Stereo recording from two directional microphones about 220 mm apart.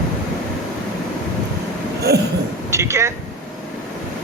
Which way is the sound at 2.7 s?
15° right (ahead or behind).